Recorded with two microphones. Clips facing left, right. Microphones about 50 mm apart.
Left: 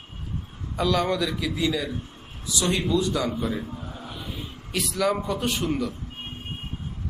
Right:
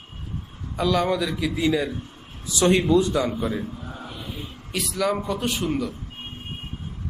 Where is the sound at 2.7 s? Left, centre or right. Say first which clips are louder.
Right 5 dB; right; by 3.6 s centre.